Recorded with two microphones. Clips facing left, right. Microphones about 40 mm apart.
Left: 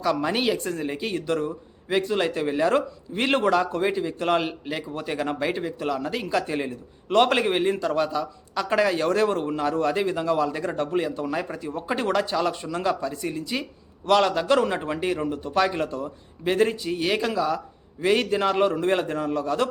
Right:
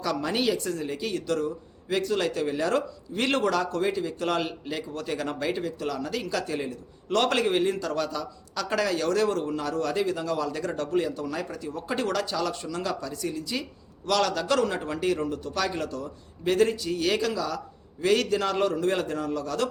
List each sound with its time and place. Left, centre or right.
0.0 s speech: left